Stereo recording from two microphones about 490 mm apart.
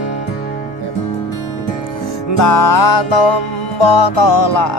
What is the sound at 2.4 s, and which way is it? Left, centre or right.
Music, left.